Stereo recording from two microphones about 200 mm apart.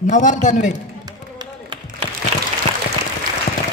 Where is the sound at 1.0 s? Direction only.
20° right (ahead or behind).